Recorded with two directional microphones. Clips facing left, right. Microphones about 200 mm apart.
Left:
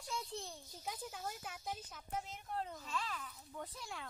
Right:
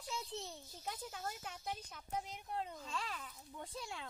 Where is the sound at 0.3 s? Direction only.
20° right (ahead or behind).